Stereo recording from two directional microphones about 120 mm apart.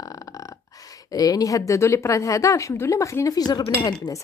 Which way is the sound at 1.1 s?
30° left (ahead or behind).